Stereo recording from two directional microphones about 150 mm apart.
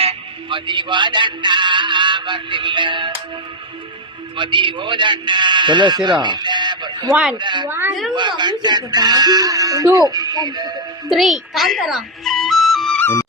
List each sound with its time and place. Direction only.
0.0 s speech: 35° right (ahead or behind)
4.4 s a man's voice: 35° right (ahead or behind)
7.1 s speech: 5° right (ahead or behind)
7.3 s a man's voice: 30° right (ahead or behind)
7.7 s speech: 15° right (ahead or behind)
8.1 s speech: 30° right (ahead or behind)
11.1 s speech: centre (ahead or behind)
13.0 s music: 15° left (ahead or behind)